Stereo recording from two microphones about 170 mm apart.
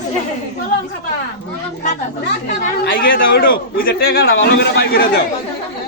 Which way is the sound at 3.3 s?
60° left (ahead or behind).